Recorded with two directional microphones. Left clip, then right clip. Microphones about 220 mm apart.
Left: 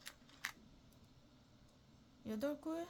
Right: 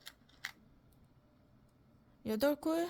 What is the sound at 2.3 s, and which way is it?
Speech, 45° right (ahead or behind).